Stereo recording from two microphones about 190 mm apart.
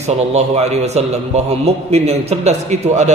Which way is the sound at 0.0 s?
35° right (ahead or behind).